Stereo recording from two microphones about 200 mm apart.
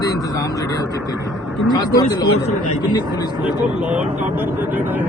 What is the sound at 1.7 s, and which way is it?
Speech, 20° left (ahead or behind).